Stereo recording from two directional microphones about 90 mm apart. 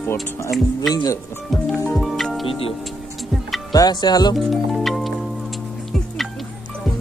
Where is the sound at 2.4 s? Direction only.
90° left.